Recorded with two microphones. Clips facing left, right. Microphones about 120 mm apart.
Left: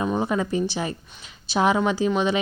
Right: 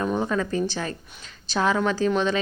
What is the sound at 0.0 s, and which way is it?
A woman's voice, 15° left (ahead or behind).